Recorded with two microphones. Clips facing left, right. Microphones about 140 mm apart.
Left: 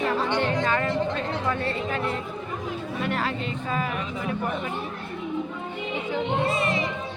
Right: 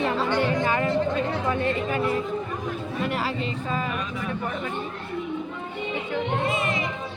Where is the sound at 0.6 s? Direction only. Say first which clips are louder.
Right 1 dB; 10° right (ahead or behind).